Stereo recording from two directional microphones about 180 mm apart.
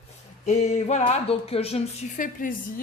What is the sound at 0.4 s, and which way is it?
A woman's voice, 40° left (ahead or behind).